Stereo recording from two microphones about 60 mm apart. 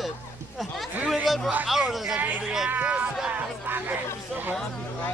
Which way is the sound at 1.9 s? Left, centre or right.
Centre.